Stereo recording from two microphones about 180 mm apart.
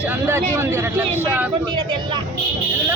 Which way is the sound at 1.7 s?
25° right (ahead or behind).